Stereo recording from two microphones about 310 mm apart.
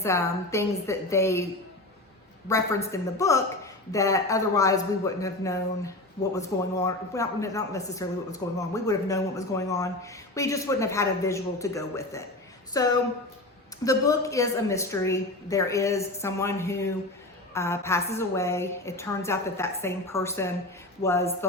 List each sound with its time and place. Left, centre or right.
0.0 s a man's voice: centre
2.5 s a man's voice: centre